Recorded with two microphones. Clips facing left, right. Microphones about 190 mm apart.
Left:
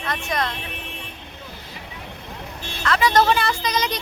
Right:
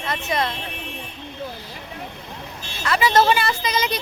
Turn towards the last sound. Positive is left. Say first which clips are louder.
# right 1 dB
turn(degrees=-5)  # may be behind; listen again after turning